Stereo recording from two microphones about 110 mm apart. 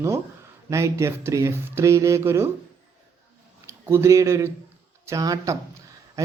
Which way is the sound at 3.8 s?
25° right (ahead or behind).